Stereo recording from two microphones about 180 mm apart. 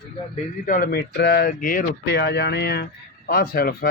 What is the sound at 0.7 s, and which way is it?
Speech, 55° left (ahead or behind).